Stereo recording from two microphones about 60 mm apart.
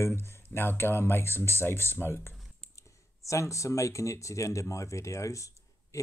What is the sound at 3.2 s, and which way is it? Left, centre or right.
Speech, left.